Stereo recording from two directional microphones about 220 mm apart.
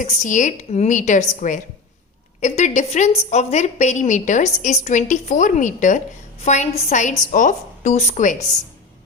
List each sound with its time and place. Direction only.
0.0 s a woman's voice: 35° left (ahead or behind)